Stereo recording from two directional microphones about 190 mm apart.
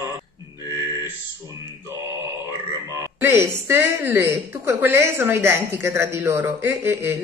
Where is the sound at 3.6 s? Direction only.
10° right (ahead or behind).